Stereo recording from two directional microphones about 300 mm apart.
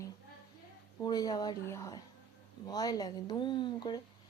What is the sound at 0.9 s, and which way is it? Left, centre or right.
Speech, centre.